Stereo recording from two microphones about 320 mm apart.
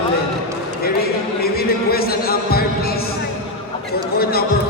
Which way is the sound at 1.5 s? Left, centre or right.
Left.